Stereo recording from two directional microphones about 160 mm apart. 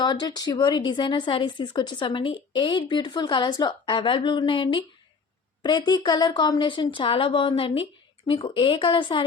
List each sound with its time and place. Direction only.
0.0 s speech: 25° left (ahead or behind)